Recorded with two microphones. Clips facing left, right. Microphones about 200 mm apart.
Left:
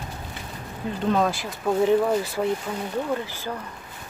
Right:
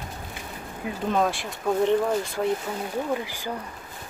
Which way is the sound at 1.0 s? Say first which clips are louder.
Left 2 dB; centre (ahead or behind).